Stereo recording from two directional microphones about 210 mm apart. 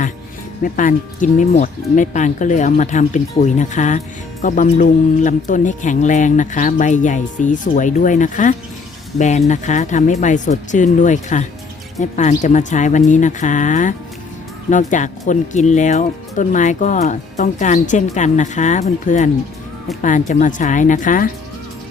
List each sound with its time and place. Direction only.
0.6 s speech: 40° left (ahead or behind)